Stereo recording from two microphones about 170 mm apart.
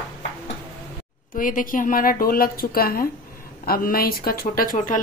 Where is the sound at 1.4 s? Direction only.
55° left (ahead or behind).